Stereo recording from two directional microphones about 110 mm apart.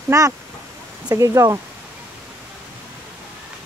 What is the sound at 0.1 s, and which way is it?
Speech, 30° right (ahead or behind).